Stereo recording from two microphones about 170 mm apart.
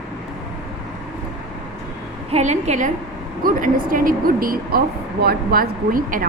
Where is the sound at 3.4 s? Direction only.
55° right (ahead or behind).